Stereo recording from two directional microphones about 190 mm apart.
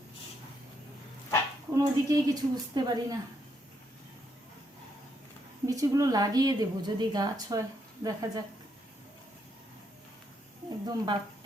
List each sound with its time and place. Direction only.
1.7 s a woman's voice: 20° right (ahead or behind)
5.6 s a woman's voice: 15° right (ahead or behind)
10.8 s a woman's voice: 20° right (ahead or behind)